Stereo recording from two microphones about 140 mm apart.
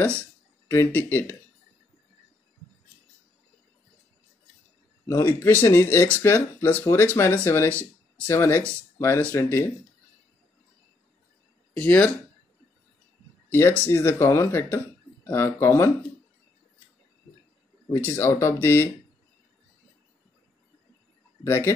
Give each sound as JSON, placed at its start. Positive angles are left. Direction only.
{"t": 0.2, "sound": "speech", "side_deg": 15}
{"t": 5.0, "sound": "speech", "side_deg": 20}
{"t": 11.7, "sound": "speech", "side_deg": 10}
{"t": 13.5, "sound": "speech", "side_deg": 15}
{"t": 17.9, "sound": "speech", "side_deg": 20}
{"t": 21.5, "sound": "speech", "side_deg": 15}